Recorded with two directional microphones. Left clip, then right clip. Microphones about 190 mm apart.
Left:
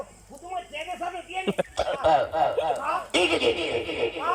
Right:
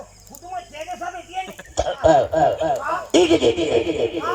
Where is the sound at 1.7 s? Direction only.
35° right (ahead or behind).